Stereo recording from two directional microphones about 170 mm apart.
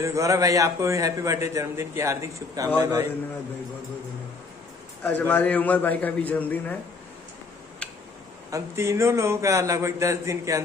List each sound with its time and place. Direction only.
0.0 s a man's voice: 15° right (ahead or behind)
5.0 s a man's voice: 10° left (ahead or behind)
7.8 s a sound: 5° left (ahead or behind)
8.5 s a man's voice: 15° right (ahead or behind)